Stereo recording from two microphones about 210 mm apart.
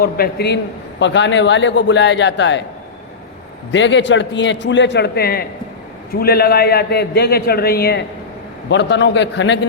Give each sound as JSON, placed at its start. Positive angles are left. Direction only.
{"t": 0.0, "sound": "a man's voice", "side_deg": 50}
{"t": 3.7, "sound": "a man's voice", "side_deg": 60}